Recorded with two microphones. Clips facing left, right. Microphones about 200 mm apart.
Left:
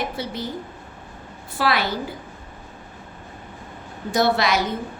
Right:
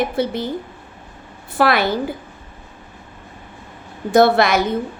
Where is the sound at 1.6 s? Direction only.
55° right (ahead or behind).